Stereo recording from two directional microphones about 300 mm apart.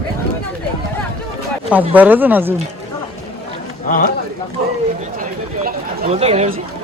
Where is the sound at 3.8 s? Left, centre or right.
Left.